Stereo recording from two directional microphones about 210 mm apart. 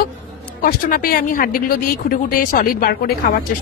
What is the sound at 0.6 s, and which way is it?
Speech, 45° left (ahead or behind).